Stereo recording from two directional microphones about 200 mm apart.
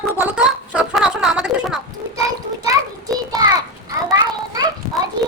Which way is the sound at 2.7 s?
20° right (ahead or behind).